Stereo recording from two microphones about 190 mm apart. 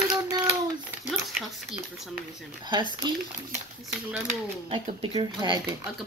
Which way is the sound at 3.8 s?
5° right (ahead or behind).